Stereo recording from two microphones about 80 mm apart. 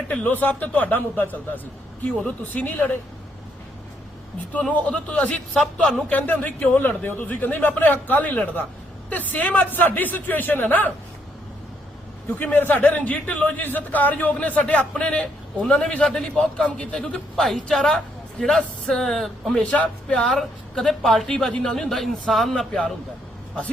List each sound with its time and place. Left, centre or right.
0.1 s a man's voice: left
4.7 s a man's voice: centre
12.4 s a man's voice: left; by 19.5 s centre
19.5 s a man's voice: centre